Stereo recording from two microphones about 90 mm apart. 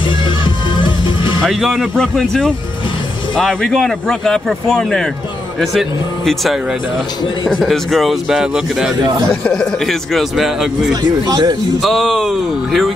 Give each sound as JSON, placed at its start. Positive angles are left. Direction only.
{"t": 0.7, "sound": "music", "side_deg": 65}
{"t": 1.4, "sound": "a man's voice", "side_deg": 0}
{"t": 9.3, "sound": "a man's voice", "side_deg": 10}
{"t": 11.0, "sound": "speech", "side_deg": -50}
{"t": 11.8, "sound": "a man's voice", "side_deg": 0}